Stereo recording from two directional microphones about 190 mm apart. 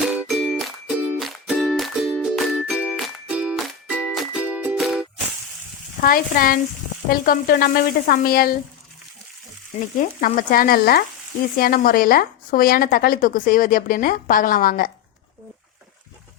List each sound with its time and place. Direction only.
0.0 s music: centre (ahead or behind)
6.0 s a woman's voice: 50° left (ahead or behind)
10.0 s a woman's voice: 45° left (ahead or behind)